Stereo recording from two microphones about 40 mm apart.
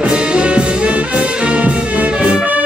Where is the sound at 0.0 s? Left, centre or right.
Right.